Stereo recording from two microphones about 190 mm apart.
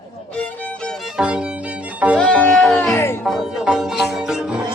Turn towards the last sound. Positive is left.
turn(degrees=-5)  # may be behind; listen again after turning